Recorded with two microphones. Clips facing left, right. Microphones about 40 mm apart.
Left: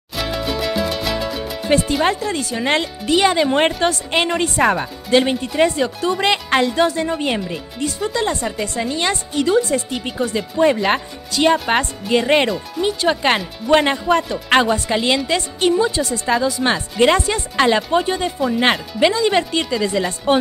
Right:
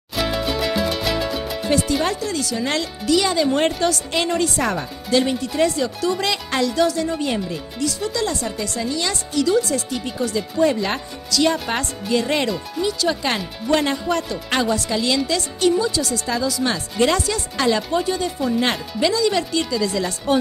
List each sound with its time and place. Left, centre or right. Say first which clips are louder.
0.1 s music: even; centre
1.7 s speech: left 4 dB; left